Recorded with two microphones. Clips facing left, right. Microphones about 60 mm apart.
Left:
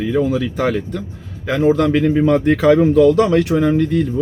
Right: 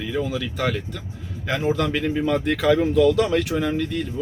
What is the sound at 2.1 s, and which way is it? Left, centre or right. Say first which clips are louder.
Speech: left 8 dB; left.